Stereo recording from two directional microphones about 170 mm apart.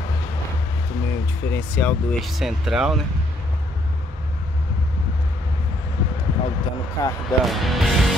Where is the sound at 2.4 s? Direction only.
5° right (ahead or behind).